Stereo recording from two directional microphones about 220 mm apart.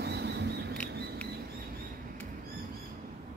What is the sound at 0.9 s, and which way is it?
Rodents, 45° right (ahead or behind).